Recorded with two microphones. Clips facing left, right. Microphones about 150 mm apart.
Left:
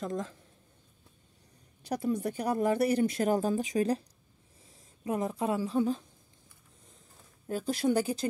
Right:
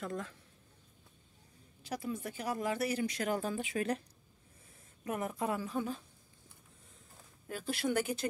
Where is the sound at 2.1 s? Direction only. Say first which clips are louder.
Left 8 dB; 35° left (ahead or behind).